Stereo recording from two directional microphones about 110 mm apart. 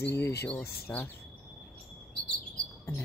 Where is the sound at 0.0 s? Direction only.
25° left (ahead or behind).